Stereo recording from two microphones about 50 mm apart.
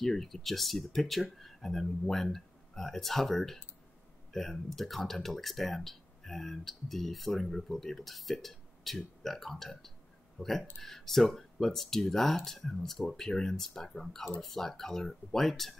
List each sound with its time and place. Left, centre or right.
0.0 s speech: centre